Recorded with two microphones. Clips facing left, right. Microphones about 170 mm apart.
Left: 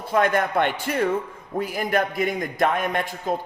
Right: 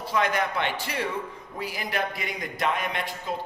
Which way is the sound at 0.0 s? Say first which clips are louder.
Left 5 dB; 50° left (ahead or behind).